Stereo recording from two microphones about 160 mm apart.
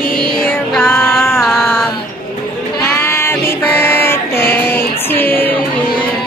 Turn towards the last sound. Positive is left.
turn(degrees=10)  # may be behind; listen again after turning